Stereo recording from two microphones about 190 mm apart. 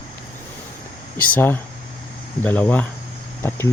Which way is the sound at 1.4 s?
10° left (ahead or behind).